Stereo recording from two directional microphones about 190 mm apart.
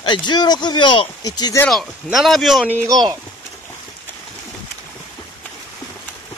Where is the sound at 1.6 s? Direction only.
Centre (ahead or behind).